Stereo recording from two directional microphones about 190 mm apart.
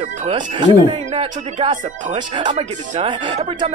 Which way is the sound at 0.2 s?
25° right (ahead or behind).